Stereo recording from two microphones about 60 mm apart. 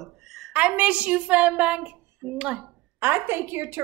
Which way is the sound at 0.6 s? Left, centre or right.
Right.